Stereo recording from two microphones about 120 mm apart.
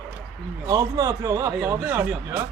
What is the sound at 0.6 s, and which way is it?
Speech, 30° right (ahead or behind).